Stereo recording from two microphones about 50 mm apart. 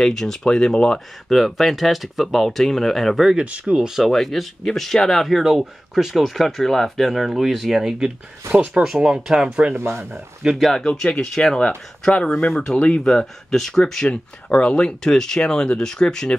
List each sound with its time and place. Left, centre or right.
0.0 s speech: centre
1.3 s speech: centre
3.3 s speech: right
4.0 s speech: centre
5.3 s speech: centre
8.4 s speech: right
8.8 s speech: centre
10.4 s speech: centre
10.9 s speech: centre
13.0 s speech: centre
14.1 s speech: left